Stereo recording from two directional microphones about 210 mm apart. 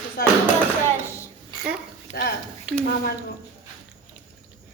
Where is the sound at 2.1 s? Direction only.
35° left (ahead or behind).